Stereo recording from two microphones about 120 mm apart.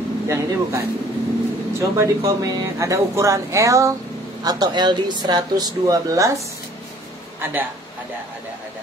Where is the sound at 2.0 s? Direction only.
30° right (ahead or behind).